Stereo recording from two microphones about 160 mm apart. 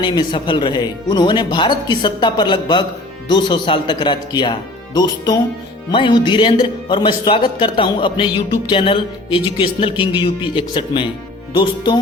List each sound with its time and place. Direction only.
0.0 s speech: 30° left (ahead or behind)